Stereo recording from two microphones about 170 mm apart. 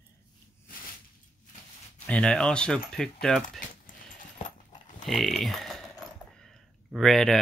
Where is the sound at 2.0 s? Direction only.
5° left (ahead or behind).